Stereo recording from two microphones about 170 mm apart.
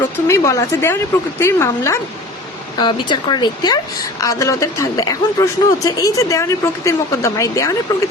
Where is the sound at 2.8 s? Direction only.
25° left (ahead or behind).